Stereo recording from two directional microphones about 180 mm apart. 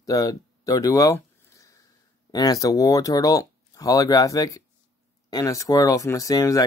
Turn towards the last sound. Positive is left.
turn(degrees=20)  # may be behind; listen again after turning